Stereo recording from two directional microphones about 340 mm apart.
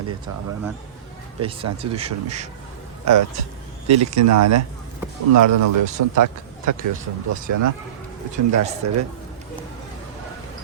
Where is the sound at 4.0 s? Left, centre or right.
Right.